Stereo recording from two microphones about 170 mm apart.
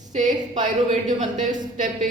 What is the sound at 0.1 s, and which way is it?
Speech, 45° right (ahead or behind).